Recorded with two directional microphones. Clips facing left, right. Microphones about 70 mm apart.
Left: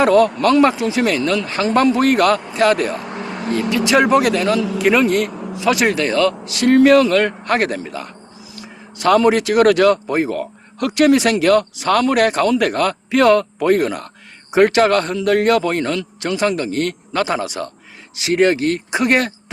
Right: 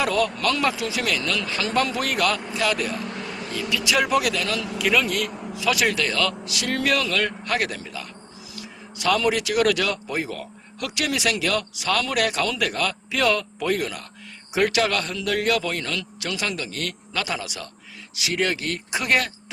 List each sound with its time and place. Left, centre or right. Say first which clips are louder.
0.0 s speech: left 10 dB; left
3.1 s vehicle: left 6 dB; left
3.4 s speech: left 9 dB; left